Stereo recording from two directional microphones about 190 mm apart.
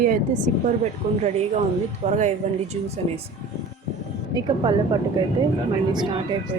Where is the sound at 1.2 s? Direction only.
35° right (ahead or behind).